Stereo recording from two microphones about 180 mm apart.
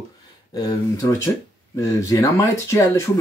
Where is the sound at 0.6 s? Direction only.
20° left (ahead or behind).